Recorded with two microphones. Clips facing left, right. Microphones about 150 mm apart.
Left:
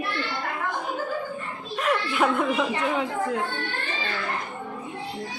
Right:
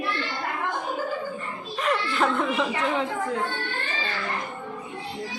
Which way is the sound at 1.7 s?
5° left (ahead or behind).